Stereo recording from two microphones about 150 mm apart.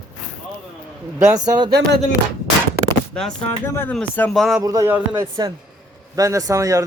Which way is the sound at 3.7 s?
15° left (ahead or behind).